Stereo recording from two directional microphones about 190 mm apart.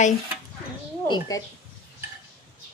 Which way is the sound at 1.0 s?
25° left (ahead or behind).